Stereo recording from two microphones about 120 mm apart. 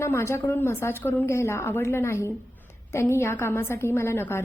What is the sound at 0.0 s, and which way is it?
A woman's voice, 20° left (ahead or behind).